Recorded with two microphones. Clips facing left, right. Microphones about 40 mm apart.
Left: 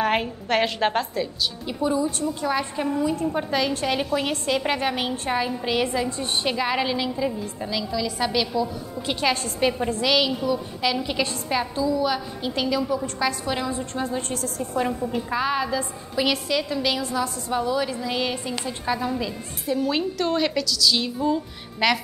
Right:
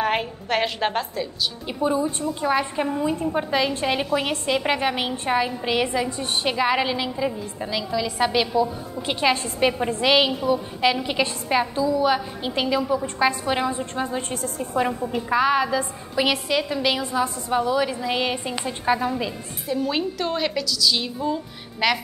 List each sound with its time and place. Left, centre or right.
0.0 s a woman's voice: centre
1.7 s a woman's voice: right
3.3 s a woman's voice: centre; by 14.9 s right
14.9 s a woman's voice: centre
19.7 s a woman's voice: centre